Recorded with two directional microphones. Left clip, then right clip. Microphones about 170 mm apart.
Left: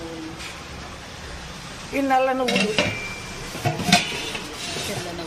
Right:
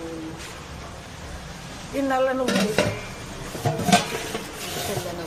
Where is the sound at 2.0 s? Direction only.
20° left (ahead or behind).